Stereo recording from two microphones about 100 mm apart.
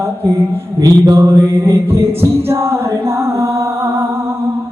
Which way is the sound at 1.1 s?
25° right (ahead or behind).